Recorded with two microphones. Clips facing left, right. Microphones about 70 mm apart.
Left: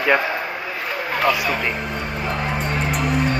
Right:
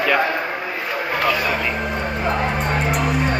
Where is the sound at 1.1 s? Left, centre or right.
Centre.